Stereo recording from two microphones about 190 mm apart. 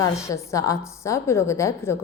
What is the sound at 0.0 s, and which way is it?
A woman's voice, 15° left (ahead or behind).